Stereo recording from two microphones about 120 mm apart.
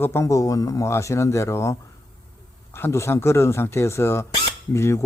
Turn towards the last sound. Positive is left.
turn(degrees=25)  # may be behind; listen again after turning